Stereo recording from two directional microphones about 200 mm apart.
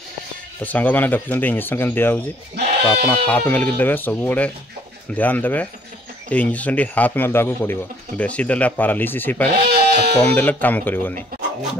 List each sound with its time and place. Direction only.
0.6 s a man's voice: 10° left (ahead or behind)
9.6 s goat: 55° right (ahead or behind)
10.2 s a man's voice: 10° left (ahead or behind)